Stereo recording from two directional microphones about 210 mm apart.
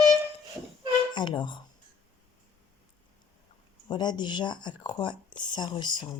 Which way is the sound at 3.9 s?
20° left (ahead or behind).